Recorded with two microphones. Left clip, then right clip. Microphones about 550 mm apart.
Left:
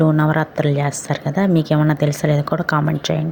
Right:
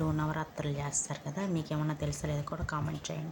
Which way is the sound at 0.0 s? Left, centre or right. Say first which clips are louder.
Left 18 dB; right.